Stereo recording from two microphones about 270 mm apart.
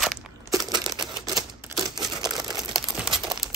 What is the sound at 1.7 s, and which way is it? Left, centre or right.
Crumpling, centre.